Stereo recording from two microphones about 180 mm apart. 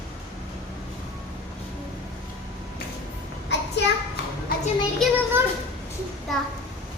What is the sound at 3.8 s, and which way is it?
Children playing, 75° left (ahead or behind).